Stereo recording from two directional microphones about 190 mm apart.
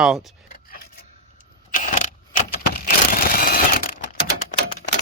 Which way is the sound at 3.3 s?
50° left (ahead or behind).